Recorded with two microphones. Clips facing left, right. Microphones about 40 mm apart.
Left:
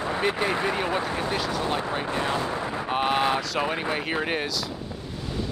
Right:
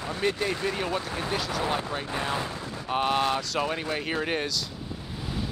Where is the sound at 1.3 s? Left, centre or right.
Centre.